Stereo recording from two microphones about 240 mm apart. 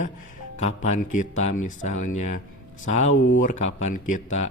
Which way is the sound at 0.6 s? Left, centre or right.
Left.